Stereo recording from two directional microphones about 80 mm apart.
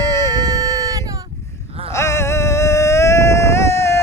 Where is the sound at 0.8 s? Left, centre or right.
Right.